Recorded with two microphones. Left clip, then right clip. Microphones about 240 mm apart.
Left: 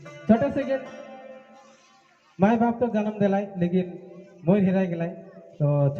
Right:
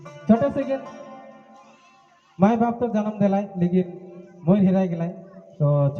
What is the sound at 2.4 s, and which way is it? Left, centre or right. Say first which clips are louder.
A man's voice: right 1 dB; right.